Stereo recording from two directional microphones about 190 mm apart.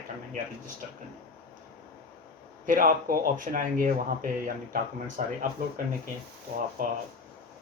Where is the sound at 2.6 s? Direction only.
45° right (ahead or behind).